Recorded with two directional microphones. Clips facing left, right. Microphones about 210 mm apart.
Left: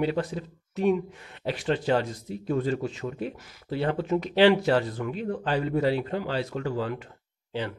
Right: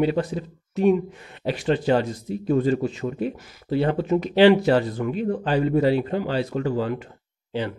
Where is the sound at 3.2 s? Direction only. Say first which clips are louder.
Right 6 dB; 10° right (ahead or behind).